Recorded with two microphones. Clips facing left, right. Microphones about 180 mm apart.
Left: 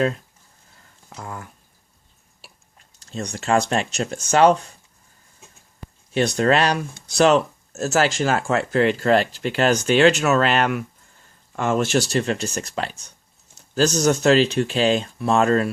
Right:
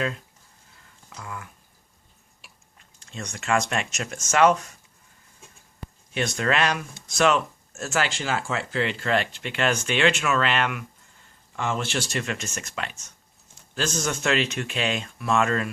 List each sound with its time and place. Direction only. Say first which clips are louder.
1.1 s speech: left 4 dB; 40° left (ahead or behind)
6.1 s speech: left 6 dB; 35° left (ahead or behind)